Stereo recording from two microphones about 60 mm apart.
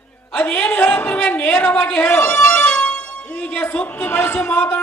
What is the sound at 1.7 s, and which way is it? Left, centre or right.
Speech, centre.